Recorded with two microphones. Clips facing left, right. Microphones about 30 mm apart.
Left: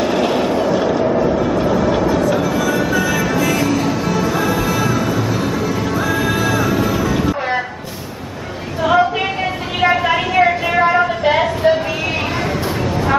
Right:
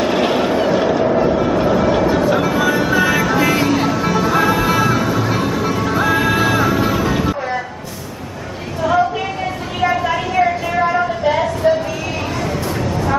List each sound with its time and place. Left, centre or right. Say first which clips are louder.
0.0 s vehicle: even; centre
4.0 s music: right 2 dB; centre
6.8 s vehicle: even; centre
8.8 s a sound: left 2 dB; left